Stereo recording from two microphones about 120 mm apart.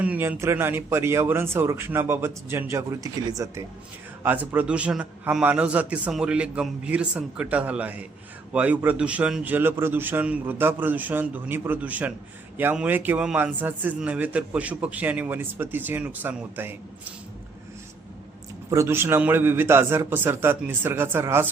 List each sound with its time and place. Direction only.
0.0 s speech: 15° right (ahead or behind)
4.2 s a man's voice: 15° right (ahead or behind)
18.7 s speech: 20° right (ahead or behind)